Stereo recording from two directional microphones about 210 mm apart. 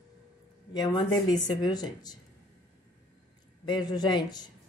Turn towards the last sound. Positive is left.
turn(degrees=20)  # may be behind; listen again after turning